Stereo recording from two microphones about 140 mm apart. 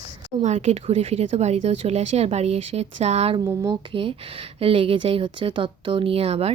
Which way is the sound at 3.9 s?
40° right (ahead or behind).